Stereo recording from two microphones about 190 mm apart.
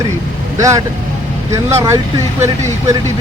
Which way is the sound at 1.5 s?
15° right (ahead or behind).